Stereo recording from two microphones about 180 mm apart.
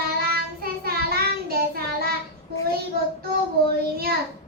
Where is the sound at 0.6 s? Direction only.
55° right (ahead or behind).